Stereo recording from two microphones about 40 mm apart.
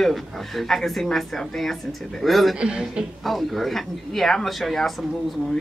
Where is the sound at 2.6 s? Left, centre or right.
Centre.